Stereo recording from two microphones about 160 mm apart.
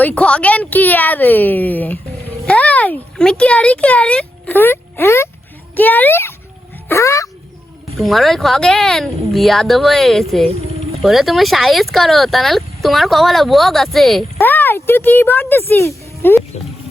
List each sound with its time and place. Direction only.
0.0 s a woman's voice: 10° left (ahead or behind)
7.9 s speech: centre (ahead or behind)
14.3 s a woman's voice: 15° left (ahead or behind)